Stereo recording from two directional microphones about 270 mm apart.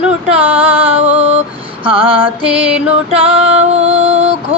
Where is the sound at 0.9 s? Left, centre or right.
Left.